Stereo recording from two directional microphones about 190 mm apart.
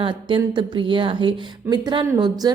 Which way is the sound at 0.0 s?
25° right (ahead or behind).